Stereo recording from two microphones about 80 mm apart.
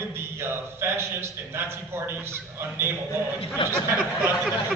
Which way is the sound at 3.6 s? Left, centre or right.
Left.